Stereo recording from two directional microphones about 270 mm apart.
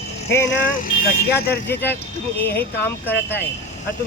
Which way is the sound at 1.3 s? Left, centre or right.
Left.